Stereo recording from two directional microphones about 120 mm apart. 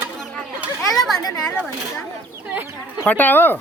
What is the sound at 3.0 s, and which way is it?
Speech, 15° left (ahead or behind).